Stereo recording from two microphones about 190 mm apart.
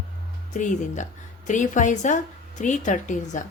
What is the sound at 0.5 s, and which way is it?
A woman's voice, 40° left (ahead or behind).